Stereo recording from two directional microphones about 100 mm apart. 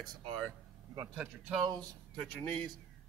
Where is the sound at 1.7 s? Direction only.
5° left (ahead or behind).